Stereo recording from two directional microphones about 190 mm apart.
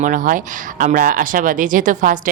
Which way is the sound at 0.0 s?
45° right (ahead or behind).